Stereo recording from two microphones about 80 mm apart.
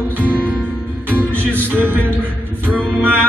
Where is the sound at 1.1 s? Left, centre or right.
Right.